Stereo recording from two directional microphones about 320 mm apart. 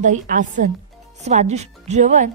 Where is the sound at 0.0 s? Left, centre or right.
Right.